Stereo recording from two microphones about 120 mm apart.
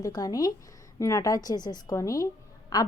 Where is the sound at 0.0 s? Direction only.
30° left (ahead or behind).